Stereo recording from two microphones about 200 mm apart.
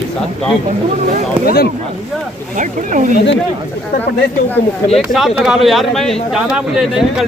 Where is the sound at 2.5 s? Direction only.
40° right (ahead or behind).